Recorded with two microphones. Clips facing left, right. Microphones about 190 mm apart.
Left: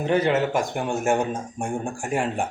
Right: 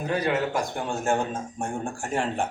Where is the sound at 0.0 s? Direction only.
25° left (ahead or behind).